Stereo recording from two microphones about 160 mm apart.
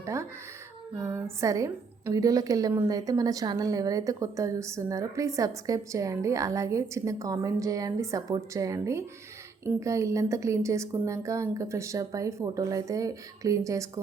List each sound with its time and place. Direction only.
0.0 s a woman's voice: 20° right (ahead or behind)